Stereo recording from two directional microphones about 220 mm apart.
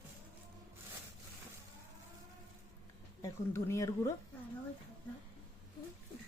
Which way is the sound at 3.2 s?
15° left (ahead or behind).